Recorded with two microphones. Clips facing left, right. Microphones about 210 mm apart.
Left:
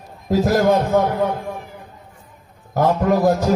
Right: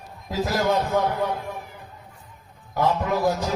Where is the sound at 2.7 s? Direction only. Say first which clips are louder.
Left 6 dB; 50° left (ahead or behind).